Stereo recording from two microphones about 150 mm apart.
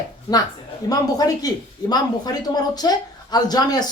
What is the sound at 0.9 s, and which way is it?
A man's voice, 25° left (ahead or behind).